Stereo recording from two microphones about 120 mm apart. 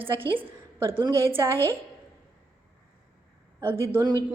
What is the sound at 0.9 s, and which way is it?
Speech, 45° right (ahead or behind).